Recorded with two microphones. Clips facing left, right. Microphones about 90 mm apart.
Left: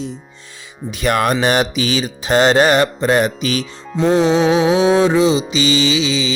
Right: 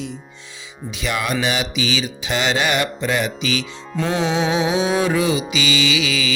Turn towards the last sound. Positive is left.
turn(degrees=25)  # may be behind; listen again after turning